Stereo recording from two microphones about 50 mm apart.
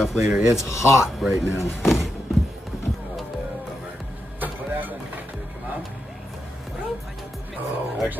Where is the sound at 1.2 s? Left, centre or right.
Centre.